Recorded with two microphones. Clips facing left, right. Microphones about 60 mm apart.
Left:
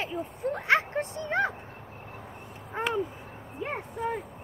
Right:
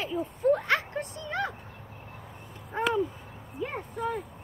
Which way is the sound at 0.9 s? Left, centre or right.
Left.